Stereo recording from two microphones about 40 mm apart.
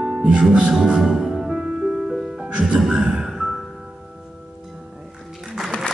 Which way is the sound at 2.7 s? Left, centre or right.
Centre.